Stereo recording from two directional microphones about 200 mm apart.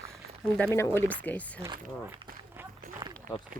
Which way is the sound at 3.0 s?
20° right (ahead or behind).